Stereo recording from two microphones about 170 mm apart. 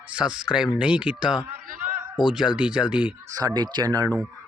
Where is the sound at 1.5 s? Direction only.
55° right (ahead or behind).